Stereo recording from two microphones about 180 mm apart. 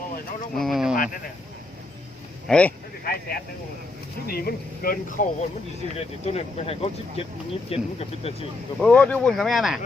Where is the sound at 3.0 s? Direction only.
55° left (ahead or behind).